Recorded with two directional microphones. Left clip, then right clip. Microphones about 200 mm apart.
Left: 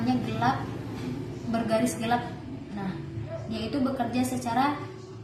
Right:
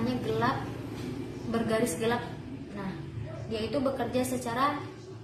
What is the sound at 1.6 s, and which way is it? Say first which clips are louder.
Speech: left 1 dB; 15° right (ahead or behind).